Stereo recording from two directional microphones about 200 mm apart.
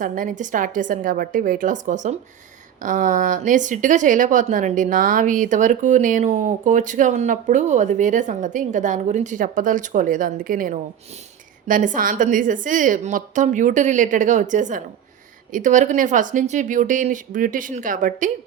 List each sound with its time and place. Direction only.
0.0 s speech: 40° right (ahead or behind)